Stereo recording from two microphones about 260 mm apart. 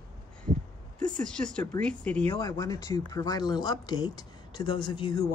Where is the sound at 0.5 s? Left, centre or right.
Right.